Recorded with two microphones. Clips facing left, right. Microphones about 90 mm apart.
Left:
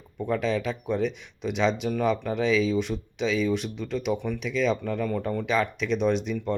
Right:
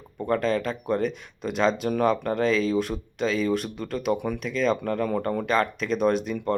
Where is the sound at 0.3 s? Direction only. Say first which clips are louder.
Right 2 dB; 45° right (ahead or behind).